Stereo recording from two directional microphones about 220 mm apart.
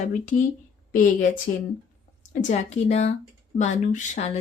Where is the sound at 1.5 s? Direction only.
35° left (ahead or behind).